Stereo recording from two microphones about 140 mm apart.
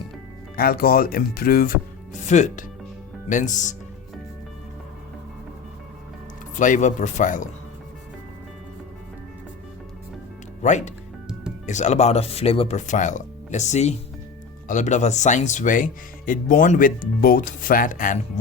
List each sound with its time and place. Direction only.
0.5 s speech: 90° left
2.2 s speech: 60° left (ahead or behind)
6.6 s speech: 60° left (ahead or behind)
10.6 s speech: 55° left (ahead or behind); by 18.2 s 70° left (ahead or behind)